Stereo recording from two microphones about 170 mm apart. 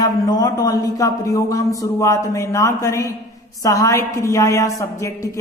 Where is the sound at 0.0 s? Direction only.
20° left (ahead or behind).